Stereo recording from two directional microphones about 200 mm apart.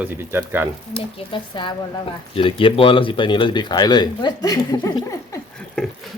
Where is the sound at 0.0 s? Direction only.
10° right (ahead or behind).